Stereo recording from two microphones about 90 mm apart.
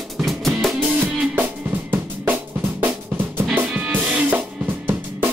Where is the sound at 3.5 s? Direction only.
20° right (ahead or behind).